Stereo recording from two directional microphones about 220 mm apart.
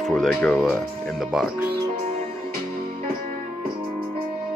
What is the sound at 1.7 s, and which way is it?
Music, 25° right (ahead or behind).